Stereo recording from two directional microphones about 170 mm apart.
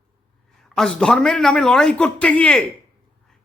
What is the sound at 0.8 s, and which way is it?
A man's voice, centre (ahead or behind).